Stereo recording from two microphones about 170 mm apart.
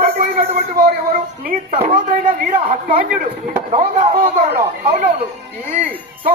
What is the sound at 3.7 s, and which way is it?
Speech, 40° right (ahead or behind).